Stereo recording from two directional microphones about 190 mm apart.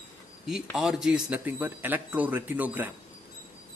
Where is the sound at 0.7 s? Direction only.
Centre (ahead or behind).